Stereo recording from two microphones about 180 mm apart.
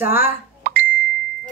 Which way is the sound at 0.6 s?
60° right (ahead or behind).